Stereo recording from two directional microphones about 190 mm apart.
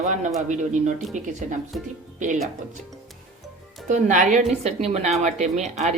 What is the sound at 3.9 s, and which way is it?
Speech, 40° right (ahead or behind).